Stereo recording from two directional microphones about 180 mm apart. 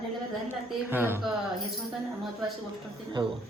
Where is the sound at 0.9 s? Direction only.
10° right (ahead or behind).